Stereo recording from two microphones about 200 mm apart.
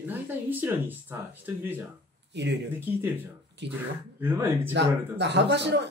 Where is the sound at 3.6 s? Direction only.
60° right (ahead or behind).